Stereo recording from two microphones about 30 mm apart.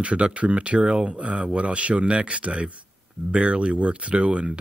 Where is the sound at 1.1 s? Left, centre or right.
Right.